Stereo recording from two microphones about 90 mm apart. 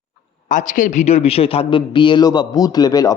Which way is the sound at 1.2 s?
90° left.